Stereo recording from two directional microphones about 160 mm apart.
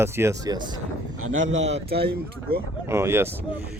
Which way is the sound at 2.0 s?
80° right.